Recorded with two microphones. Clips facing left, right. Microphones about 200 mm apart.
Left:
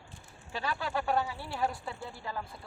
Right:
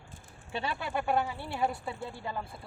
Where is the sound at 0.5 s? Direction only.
25° right (ahead or behind).